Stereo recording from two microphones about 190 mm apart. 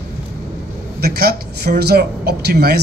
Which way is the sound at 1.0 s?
55° right (ahead or behind).